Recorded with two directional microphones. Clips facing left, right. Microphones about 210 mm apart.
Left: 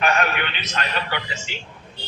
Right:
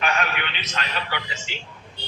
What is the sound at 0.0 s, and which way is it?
A man's voice, 45° left (ahead or behind).